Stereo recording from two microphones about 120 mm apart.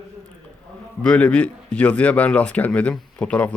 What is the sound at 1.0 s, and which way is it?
Speech, 10° left (ahead or behind).